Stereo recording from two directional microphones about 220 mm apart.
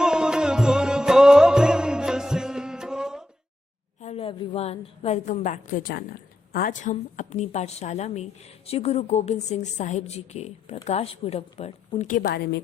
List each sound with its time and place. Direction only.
0.0 s music: 5° right (ahead or behind)
4.0 s a woman's voice: 25° left (ahead or behind); by 12.6 s 50° left (ahead or behind)